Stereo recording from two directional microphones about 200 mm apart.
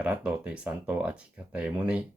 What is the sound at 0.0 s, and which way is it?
Speech, 5° right (ahead or behind).